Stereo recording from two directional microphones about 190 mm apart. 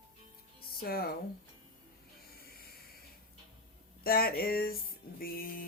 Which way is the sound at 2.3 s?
55° left (ahead or behind).